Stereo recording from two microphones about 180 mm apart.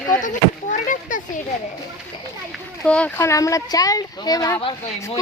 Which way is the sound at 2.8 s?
5° left (ahead or behind).